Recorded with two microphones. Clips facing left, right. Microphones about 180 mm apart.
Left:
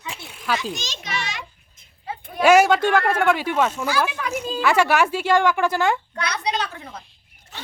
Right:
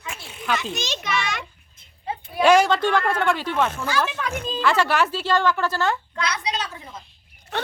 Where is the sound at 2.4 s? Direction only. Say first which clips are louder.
Left 2 dB; 10° left (ahead or behind).